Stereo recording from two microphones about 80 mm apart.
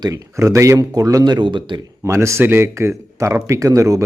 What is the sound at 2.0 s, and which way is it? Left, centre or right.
Speech, right.